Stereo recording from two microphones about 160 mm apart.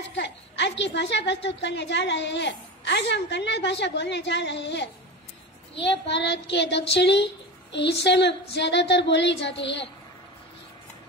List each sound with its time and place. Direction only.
0.1 s a woman's voice: 90° left